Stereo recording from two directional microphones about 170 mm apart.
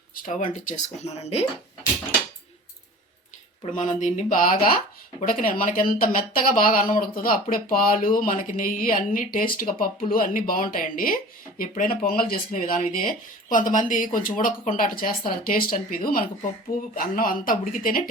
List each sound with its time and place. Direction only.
0.3 s speech: 45° left (ahead or behind)
3.8 s speech: 45° left (ahead or behind)